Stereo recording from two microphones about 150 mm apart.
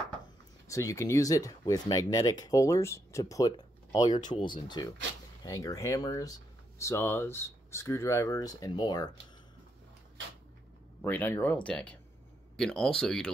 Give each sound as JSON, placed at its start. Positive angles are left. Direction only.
{"t": 0.7, "sound": "speech", "side_deg": 20}
{"t": 11.0, "sound": "speech", "side_deg": 15}